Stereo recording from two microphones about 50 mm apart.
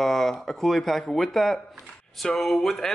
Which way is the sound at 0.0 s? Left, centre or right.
Centre.